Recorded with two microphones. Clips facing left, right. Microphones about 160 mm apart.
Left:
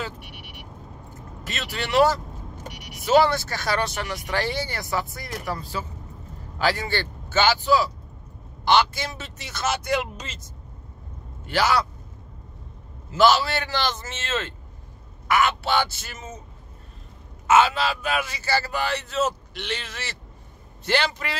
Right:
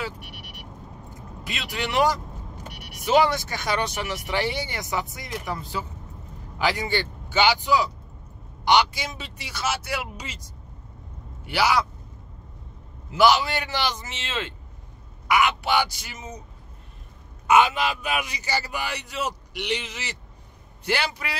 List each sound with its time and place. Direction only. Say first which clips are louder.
1.4 s speech: right 1 dB; 15° right (ahead or behind)
13.1 s speech: even; 15° right (ahead or behind)
17.5 s speech: even; 15° right (ahead or behind)